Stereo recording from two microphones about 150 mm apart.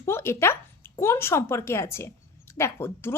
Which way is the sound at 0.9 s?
15° left (ahead or behind).